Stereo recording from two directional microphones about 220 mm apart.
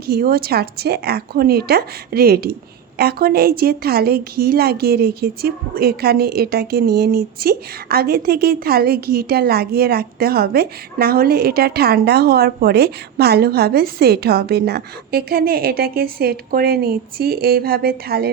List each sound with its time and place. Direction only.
0.1 s a woman's voice: 45° right (ahead or behind)